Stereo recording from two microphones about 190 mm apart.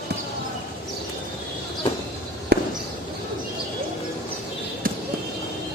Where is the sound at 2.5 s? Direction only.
55° right (ahead or behind).